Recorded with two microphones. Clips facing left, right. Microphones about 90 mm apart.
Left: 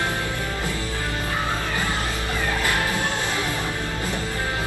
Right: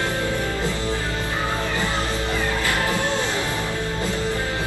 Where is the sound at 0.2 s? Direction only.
20° right (ahead or behind).